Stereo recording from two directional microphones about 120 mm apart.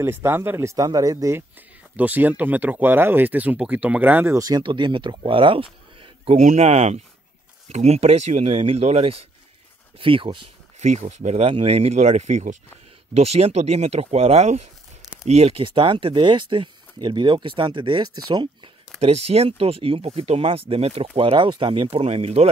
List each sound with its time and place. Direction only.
0.0 s speech: 20° right (ahead or behind)
2.0 s speech: 15° right (ahead or behind)
4.4 s speech: 35° right (ahead or behind)
6.4 s speech: 65° right (ahead or behind)
9.9 s speech: 45° right (ahead or behind)
10.8 s speech: 70° right (ahead or behind)
13.1 s speech: 60° right (ahead or behind); by 18.7 s 40° right (ahead or behind)
18.9 s speech: 60° right (ahead or behind)
21.2 s speech: 45° right (ahead or behind)
22.0 s speech: 60° right (ahead or behind)